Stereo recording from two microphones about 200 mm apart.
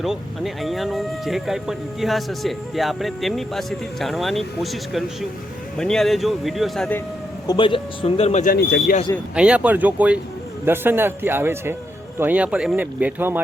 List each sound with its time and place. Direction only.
0.0 s speech: centre (ahead or behind)
7.4 s speech: 25° left (ahead or behind)
8.5 s speech: 55° left (ahead or behind)
9.3 s speech: 5° right (ahead or behind)